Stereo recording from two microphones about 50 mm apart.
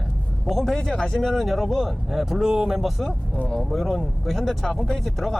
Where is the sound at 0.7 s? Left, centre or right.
Centre.